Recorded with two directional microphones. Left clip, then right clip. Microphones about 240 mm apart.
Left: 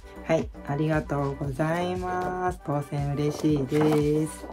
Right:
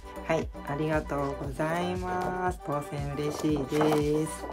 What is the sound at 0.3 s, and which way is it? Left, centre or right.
Speech, centre.